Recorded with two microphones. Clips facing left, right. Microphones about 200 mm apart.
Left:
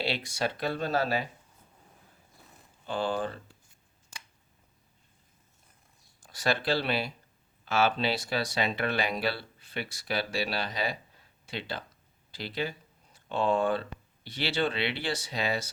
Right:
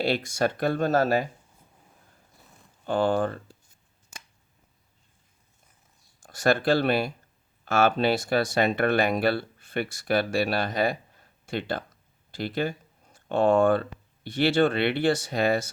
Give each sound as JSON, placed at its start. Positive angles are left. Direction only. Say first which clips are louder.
{"t": 0.0, "sound": "speech", "louder": "right 6 dB", "side_deg": -45}
{"t": 2.8, "sound": "speech", "louder": "right 7 dB", "side_deg": -50}
{"t": 6.2, "sound": "speech", "louder": "right 7 dB", "side_deg": -50}